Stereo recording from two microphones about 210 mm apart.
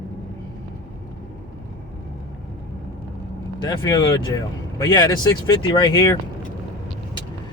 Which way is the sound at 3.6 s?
20° left (ahead or behind).